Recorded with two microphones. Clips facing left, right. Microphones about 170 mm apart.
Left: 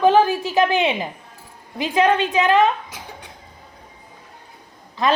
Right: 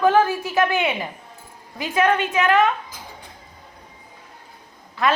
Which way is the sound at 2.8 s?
75° left (ahead or behind).